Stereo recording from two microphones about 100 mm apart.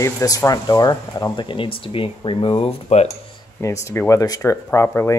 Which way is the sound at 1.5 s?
60° left (ahead or behind).